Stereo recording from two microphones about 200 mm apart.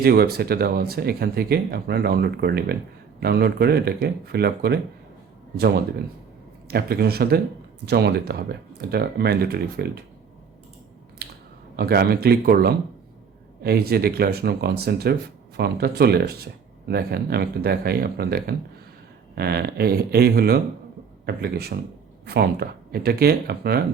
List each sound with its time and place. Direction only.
0.0 s speech: 50° right (ahead or behind)
6.7 s speech: 50° right (ahead or behind)
11.8 s speech: 50° right (ahead or behind)